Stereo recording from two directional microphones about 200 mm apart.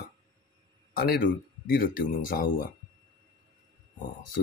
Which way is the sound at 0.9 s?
45° left (ahead or behind).